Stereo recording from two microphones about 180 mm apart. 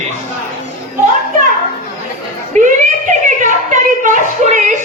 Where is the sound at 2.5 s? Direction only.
45° right (ahead or behind).